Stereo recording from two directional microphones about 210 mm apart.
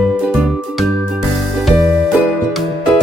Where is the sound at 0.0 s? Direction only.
5° right (ahead or behind).